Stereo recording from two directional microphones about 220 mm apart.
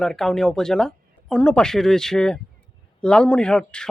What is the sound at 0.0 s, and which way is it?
Speech, centre (ahead or behind).